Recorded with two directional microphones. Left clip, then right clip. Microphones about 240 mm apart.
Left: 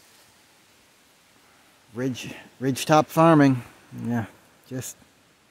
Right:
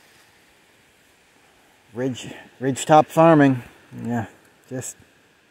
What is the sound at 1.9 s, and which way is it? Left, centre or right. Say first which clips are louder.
Speech: right 3 dB; centre.